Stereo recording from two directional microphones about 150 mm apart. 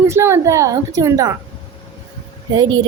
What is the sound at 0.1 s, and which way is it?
A woman's voice, 15° right (ahead or behind).